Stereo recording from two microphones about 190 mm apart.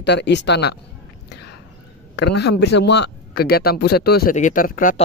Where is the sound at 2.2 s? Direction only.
60° left (ahead or behind).